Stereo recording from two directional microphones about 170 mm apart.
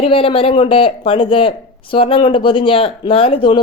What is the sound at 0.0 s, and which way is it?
Speech, 35° left (ahead or behind).